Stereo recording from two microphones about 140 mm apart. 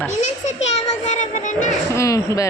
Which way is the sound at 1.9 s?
20° left (ahead or behind).